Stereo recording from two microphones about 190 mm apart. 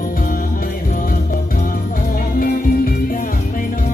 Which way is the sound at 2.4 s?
50° left (ahead or behind).